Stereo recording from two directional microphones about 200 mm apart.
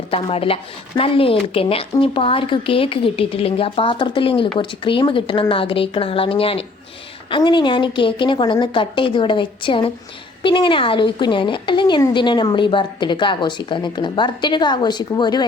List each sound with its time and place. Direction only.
0.1 s a woman's voice: 30° left (ahead or behind)